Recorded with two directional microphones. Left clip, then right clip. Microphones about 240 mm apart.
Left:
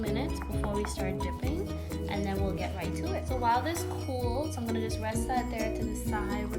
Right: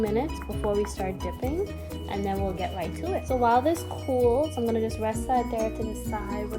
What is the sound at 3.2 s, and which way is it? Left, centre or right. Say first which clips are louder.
Music: right 7 dB; centre.